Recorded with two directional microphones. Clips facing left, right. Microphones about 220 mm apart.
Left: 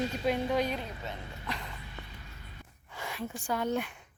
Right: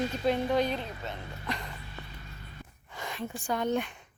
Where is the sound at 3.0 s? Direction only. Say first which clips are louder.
Right 1 dB; 10° left (ahead or behind).